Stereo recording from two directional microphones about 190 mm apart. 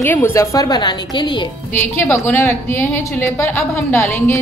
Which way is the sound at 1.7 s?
10° left (ahead or behind).